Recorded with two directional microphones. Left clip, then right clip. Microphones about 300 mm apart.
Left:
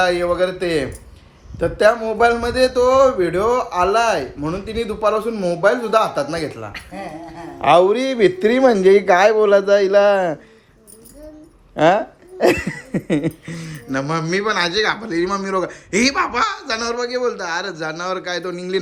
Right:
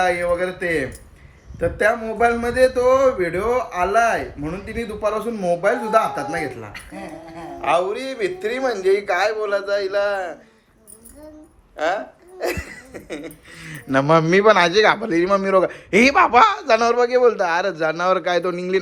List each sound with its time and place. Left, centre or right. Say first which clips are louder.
0.0 s a man's voice: left 2 dB; centre
7.6 s speech: left 7 dB; left
11.8 s speech: left 8 dB; left
13.7 s a man's voice: right 6 dB; centre